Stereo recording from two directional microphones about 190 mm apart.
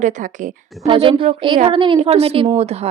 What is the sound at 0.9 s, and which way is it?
A woman's voice, 25° right (ahead or behind).